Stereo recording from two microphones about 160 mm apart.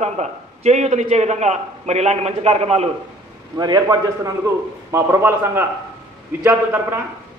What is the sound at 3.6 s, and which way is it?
A man's voice, 25° right (ahead or behind).